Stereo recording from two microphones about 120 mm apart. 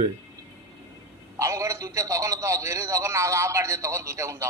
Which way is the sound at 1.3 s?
25° right (ahead or behind).